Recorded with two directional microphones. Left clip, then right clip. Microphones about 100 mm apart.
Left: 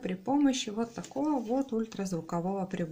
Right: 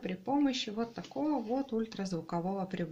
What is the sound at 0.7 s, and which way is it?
Speech, 20° left (ahead or behind).